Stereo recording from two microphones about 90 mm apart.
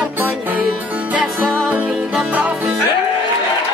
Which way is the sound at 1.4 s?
5° left (ahead or behind).